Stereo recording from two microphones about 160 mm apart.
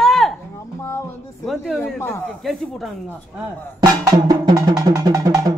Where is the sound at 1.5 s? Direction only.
Centre (ahead or behind).